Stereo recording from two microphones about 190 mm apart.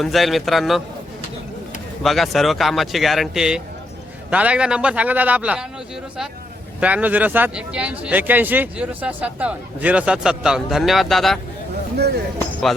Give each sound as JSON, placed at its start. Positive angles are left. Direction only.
{"t": 0.0, "sound": "speech", "side_deg": 0}
{"t": 2.0, "sound": "speech", "side_deg": 0}
{"t": 6.7, "sound": "speech", "side_deg": -10}
{"t": 11.9, "sound": "speech", "side_deg": -60}